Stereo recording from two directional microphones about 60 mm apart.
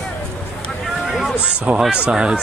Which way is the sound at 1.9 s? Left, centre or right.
Centre.